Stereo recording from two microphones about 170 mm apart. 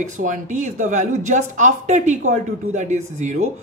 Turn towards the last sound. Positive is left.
turn(degrees=-40)  # may be behind; listen again after turning